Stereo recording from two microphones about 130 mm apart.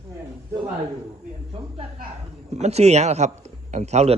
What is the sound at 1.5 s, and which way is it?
Speech, 45° right (ahead or behind).